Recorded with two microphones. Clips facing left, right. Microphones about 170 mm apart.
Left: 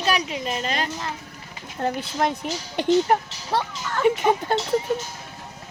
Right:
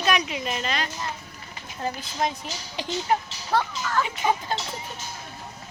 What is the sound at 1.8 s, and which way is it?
Speech, 60° left (ahead or behind).